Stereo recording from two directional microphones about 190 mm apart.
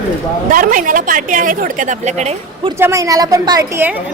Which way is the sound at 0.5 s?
45° right (ahead or behind).